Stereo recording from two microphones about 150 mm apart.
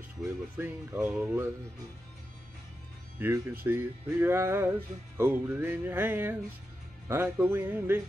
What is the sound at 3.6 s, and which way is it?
Music, 15° right (ahead or behind).